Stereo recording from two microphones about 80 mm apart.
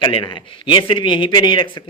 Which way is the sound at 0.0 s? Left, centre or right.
Left.